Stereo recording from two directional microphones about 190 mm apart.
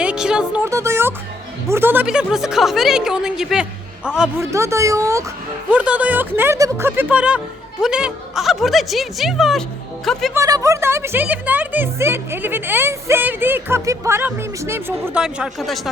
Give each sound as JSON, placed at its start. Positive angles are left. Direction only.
{"t": 0.0, "sound": "speech", "side_deg": -5}
{"t": 4.5, "sound": "speech", "side_deg": -15}
{"t": 5.7, "sound": "speech", "side_deg": -5}
{"t": 10.3, "sound": "speech", "side_deg": -15}